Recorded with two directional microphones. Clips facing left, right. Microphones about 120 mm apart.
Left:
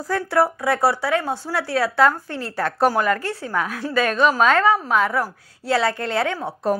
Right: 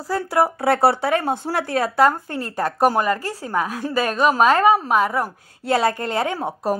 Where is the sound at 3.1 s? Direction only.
35° right (ahead or behind).